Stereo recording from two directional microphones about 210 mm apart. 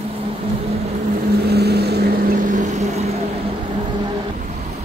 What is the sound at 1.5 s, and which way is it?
Vehicle, 50° right (ahead or behind).